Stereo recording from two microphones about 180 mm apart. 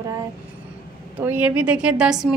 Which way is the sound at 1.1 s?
10° right (ahead or behind).